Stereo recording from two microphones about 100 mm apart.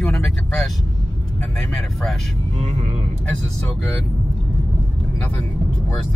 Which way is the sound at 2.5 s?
90° right.